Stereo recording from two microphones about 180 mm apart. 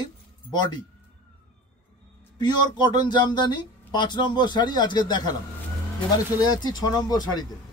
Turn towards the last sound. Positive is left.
turn(degrees=20)  # may be behind; listen again after turning